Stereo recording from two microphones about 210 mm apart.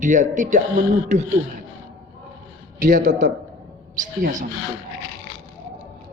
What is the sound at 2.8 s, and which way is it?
Speech, 40° right (ahead or behind).